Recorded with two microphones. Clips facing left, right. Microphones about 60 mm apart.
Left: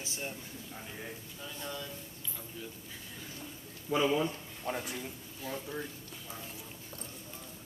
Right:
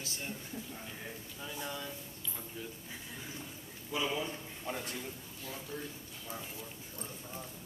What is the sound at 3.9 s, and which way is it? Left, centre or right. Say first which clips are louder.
Speech: left 6 dB; left.